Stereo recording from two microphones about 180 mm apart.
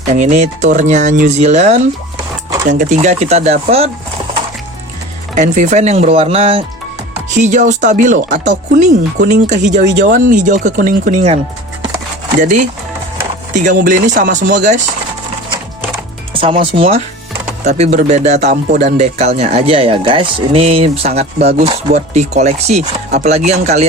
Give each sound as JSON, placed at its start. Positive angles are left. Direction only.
{"t": 0.1, "sound": "speech", "side_deg": -40}
{"t": 5.3, "sound": "speech", "side_deg": -45}
{"t": 7.4, "sound": "speech", "side_deg": -40}
{"t": 12.4, "sound": "speech", "side_deg": -45}
{"t": 16.3, "sound": "speech", "side_deg": -30}